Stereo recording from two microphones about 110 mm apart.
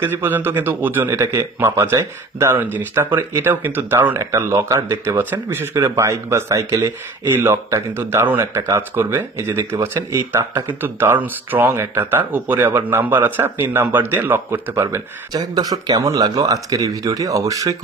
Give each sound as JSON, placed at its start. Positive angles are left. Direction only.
{"t": 0.0, "sound": "speech", "side_deg": -20}
{"t": 15.3, "sound": "speech", "side_deg": -35}